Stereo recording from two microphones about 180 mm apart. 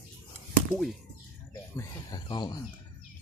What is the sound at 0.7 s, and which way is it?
Speech, centre (ahead or behind).